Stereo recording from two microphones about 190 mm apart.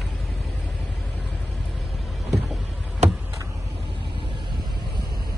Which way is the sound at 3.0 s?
35° right (ahead or behind).